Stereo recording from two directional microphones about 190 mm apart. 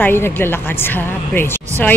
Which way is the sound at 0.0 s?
10° left (ahead or behind).